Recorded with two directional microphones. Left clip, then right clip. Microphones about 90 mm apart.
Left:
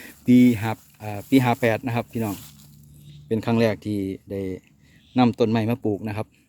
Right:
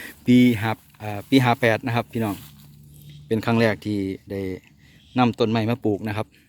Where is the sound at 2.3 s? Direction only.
45° left (ahead or behind).